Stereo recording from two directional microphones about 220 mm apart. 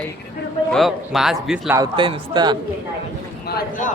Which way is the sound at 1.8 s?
20° right (ahead or behind).